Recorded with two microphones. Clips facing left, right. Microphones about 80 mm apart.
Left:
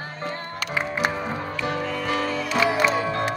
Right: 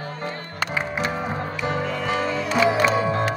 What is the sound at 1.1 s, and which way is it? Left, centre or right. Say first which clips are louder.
Music: right 1 dB; right.